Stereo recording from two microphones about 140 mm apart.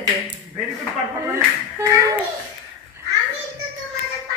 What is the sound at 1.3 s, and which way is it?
Speech, 20° right (ahead or behind).